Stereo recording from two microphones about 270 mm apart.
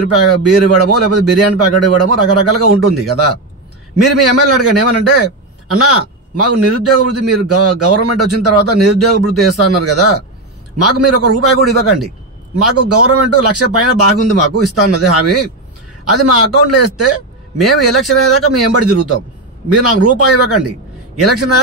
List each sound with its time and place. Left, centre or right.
0.1 s a man's voice: right
12.5 s a man's voice: right